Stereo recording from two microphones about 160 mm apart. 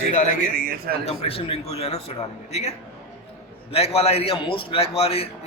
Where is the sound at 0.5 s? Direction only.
65° right (ahead or behind).